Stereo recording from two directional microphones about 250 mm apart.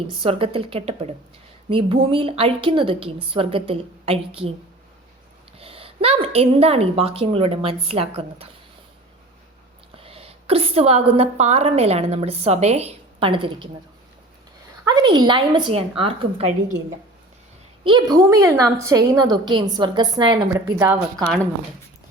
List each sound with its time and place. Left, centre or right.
0.1 s a woman's voice: right
5.5 s a woman's voice: right
9.9 s a woman's voice: right
14.8 s a woman's voice: centre
17.8 s a woman's voice: centre